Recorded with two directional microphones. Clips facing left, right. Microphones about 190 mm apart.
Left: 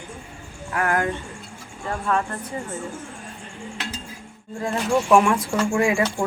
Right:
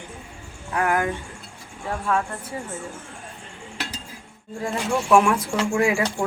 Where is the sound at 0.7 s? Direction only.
15° right (ahead or behind).